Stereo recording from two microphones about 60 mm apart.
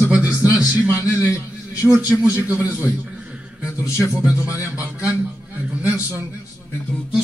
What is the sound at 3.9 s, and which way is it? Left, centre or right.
Speech, left.